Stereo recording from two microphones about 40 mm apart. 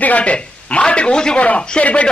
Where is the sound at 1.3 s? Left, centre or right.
Left.